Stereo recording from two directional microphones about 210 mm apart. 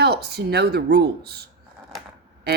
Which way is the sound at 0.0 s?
50° right (ahead or behind).